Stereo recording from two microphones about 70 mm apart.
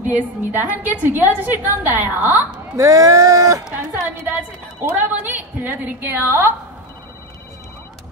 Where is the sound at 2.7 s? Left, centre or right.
Right.